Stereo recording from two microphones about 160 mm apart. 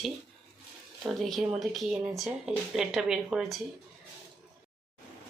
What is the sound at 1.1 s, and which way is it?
Speech, centre (ahead or behind).